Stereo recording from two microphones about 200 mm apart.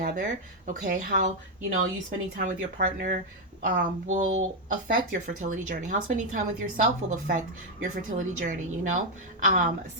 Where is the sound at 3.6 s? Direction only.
40° right (ahead or behind).